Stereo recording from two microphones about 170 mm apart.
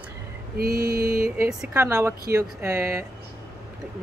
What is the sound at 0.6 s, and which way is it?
Mantra, 60° right (ahead or behind).